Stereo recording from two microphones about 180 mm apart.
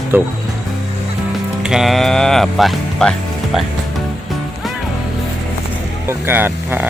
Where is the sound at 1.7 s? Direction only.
Centre (ahead or behind).